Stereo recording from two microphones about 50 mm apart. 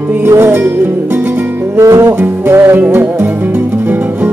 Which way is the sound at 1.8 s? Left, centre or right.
Right.